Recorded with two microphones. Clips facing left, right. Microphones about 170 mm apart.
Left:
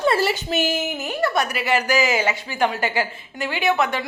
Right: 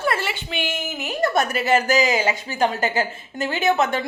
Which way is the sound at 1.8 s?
20° right (ahead or behind).